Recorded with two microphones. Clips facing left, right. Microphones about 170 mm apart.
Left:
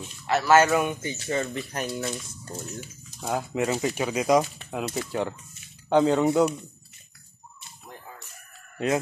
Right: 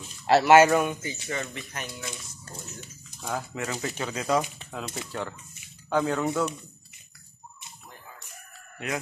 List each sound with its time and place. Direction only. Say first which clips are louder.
0.5 s speech: right 2 dB; 15° right (ahead or behind)
0.8 s speech: left 2 dB; 30° left (ahead or behind)
3.2 s speech: left 5 dB; 20° left (ahead or behind)